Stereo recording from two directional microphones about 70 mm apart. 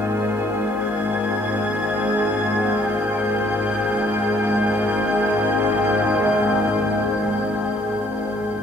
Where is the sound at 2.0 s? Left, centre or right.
Right.